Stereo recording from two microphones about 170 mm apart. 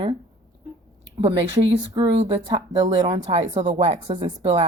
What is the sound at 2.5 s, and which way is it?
A woman's voice, 25° right (ahead or behind).